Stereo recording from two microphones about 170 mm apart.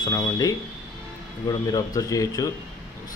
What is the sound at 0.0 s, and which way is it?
Speech, 20° left (ahead or behind).